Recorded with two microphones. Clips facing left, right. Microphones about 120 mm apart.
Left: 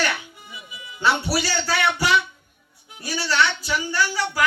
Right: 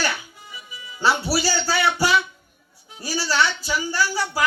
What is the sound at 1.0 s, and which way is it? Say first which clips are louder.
Speech: right 1 dB; 30° right (ahead or behind).